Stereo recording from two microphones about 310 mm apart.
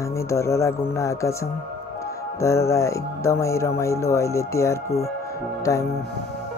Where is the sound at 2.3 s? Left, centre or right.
Centre.